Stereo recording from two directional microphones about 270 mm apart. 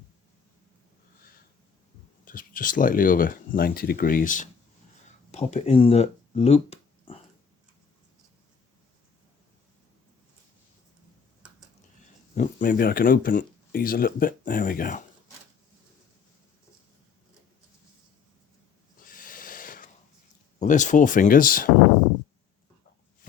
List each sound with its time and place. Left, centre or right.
2.2 s speech: left
12.3 s speech: left
19.0 s a sound: left
20.6 s speech: left